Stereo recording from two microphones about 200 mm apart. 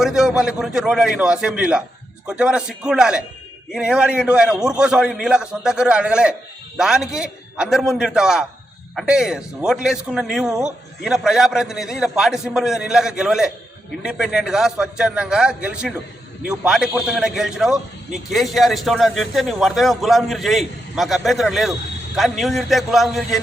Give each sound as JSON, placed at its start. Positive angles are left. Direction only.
{"t": 0.0, "sound": "a man's voice", "side_deg": -5}